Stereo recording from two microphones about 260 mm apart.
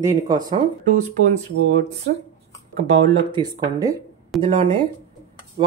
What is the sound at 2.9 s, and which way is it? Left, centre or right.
Speech, right.